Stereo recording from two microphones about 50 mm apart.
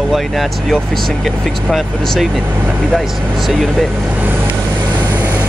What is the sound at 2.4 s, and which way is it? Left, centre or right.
Speech, right.